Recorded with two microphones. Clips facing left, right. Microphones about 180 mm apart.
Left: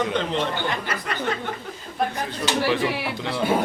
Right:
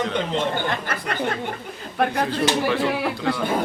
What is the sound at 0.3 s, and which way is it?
Speech, 50° right (ahead or behind).